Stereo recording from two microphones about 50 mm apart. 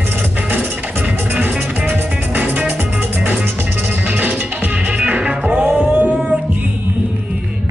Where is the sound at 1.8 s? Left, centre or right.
Right.